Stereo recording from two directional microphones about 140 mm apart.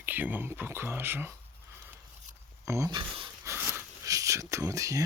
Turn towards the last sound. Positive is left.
turn(degrees=-25)  # may be behind; listen again after turning